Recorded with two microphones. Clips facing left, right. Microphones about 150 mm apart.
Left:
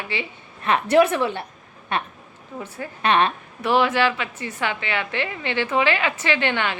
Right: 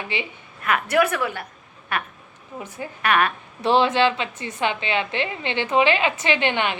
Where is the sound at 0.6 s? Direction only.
30° left (ahead or behind).